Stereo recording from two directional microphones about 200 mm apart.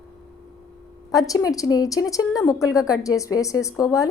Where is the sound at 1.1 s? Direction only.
15° left (ahead or behind).